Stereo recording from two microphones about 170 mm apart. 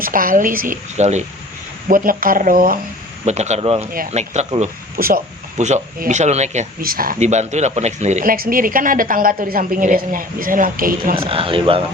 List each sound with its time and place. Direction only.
0.0 s a woman's voice: 55° right (ahead or behind)
1.9 s speech: 55° right (ahead or behind)
3.2 s speech: 40° right (ahead or behind)
4.9 s speech: 60° right (ahead or behind)
5.5 s a woman's voice: 45° right (ahead or behind)
6.8 s speech: 55° right (ahead or behind)
11.3 s speech: 30° right (ahead or behind)